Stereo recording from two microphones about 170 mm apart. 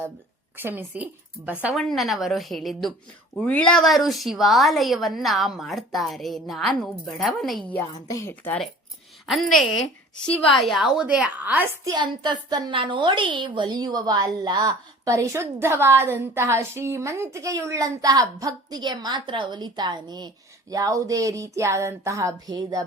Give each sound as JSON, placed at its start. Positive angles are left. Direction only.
{"t": 0.5, "sound": "a woman's voice", "side_deg": -10}
{"t": 1.7, "sound": "a woman's voice", "side_deg": 0}
{"t": 9.2, "sound": "a woman's voice", "side_deg": 0}
{"t": 11.9, "sound": "a woman's voice", "side_deg": -25}